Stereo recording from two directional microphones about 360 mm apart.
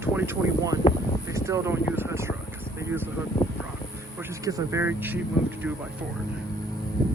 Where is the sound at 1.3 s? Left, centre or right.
Centre.